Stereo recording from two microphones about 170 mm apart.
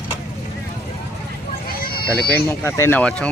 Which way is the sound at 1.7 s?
60° left (ahead or behind).